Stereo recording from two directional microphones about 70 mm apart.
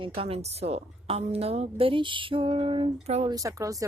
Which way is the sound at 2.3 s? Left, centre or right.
Right.